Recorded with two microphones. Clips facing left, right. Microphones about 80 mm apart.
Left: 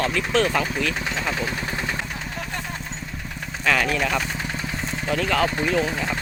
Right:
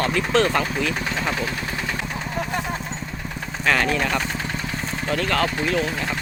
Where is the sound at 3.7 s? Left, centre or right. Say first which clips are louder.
Right 1 dB; centre.